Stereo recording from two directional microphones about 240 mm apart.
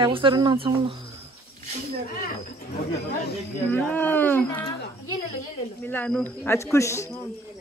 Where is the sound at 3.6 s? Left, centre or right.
Centre.